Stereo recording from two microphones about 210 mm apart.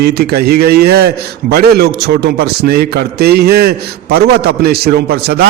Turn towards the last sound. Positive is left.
turn(degrees=-50)  # may be behind; listen again after turning